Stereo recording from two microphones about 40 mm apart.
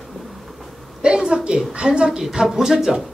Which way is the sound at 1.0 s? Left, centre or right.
Right.